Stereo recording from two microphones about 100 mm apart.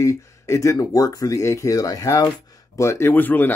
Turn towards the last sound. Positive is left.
turn(degrees=20)  # may be behind; listen again after turning